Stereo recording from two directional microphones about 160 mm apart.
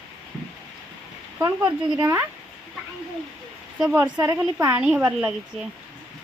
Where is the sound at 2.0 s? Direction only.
10° right (ahead or behind).